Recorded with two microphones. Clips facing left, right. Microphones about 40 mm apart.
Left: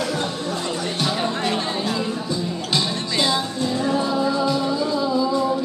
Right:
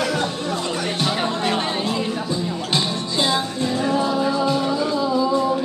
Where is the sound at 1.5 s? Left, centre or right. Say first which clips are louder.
Right 1 dB; right.